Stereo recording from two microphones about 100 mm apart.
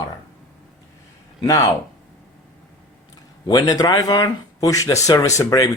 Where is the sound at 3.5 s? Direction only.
40° left (ahead or behind).